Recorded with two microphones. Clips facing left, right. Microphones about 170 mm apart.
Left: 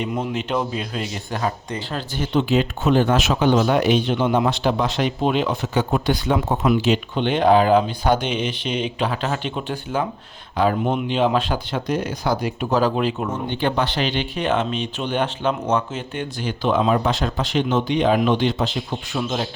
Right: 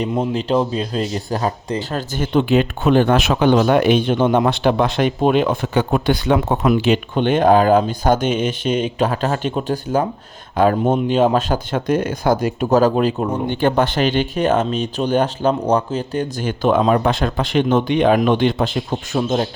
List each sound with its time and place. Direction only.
0.0 s a man's voice: 35° right (ahead or behind)
13.5 s a man's voice: 45° right (ahead or behind)